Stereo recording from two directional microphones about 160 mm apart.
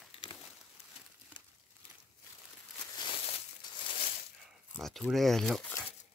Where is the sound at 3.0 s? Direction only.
35° left (ahead or behind).